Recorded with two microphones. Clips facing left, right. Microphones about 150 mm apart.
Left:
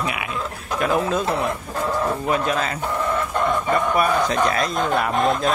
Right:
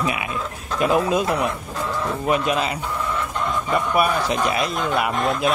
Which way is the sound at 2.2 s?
15° right (ahead or behind).